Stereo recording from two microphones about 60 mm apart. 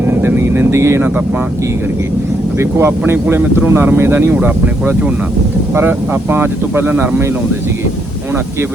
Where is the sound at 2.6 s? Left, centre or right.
Right.